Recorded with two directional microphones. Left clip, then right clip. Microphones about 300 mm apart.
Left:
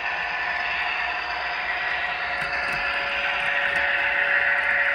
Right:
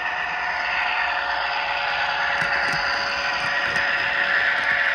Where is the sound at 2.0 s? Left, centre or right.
Centre.